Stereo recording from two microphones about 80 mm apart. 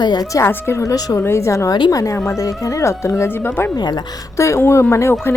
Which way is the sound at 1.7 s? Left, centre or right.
Left.